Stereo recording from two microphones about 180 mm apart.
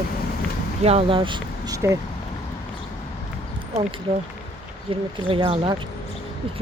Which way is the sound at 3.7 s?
40° right (ahead or behind).